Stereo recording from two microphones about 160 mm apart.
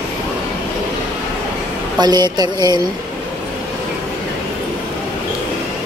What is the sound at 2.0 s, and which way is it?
Speech, 25° right (ahead or behind).